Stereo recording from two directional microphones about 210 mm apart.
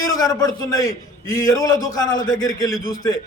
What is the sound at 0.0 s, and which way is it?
A man's voice, 15° left (ahead or behind).